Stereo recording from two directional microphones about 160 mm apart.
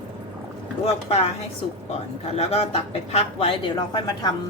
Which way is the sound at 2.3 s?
40° left (ahead or behind).